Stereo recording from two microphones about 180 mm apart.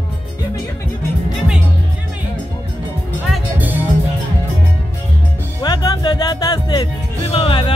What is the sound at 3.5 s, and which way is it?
Music, 10° right (ahead or behind).